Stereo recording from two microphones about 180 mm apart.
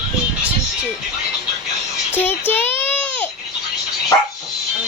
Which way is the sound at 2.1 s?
10° left (ahead or behind).